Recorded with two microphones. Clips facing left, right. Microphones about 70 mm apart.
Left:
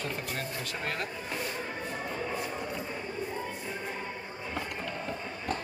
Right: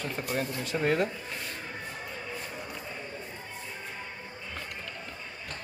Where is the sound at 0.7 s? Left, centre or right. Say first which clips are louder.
Right 10 dB; centre.